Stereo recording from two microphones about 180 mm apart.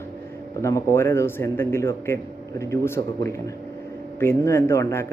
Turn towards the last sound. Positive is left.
turn(degrees=15)  # may be behind; listen again after turning